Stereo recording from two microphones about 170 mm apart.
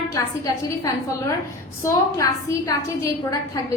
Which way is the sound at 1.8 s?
20° left (ahead or behind).